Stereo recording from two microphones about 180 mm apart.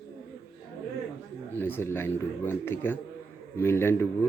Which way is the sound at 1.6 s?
10° left (ahead or behind).